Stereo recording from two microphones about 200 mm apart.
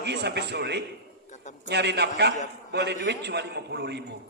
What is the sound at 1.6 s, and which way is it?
A man's voice, 55° right (ahead or behind).